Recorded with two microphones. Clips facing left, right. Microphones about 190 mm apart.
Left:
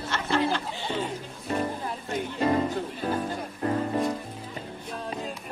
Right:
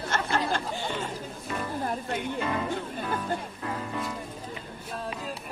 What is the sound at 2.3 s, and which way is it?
Music, 40° left (ahead or behind).